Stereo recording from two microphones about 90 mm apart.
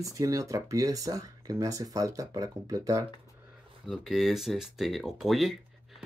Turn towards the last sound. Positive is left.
turn(degrees=0)  # may be behind; listen again after turning